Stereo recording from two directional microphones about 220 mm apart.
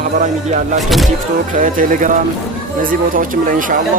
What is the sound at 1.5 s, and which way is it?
Speech, 40° right (ahead or behind).